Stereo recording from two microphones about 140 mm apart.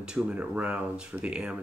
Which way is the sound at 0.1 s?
10° right (ahead or behind).